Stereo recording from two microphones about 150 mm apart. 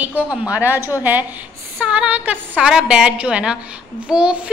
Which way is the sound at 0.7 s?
20° left (ahead or behind).